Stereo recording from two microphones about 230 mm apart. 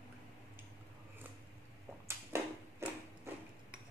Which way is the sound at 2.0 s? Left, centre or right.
Centre.